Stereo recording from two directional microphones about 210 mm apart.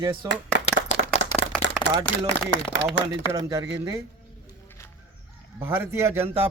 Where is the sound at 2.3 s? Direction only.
60° right (ahead or behind).